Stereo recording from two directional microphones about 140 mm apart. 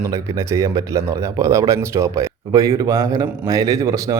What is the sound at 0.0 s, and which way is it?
A man's voice, 20° right (ahead or behind).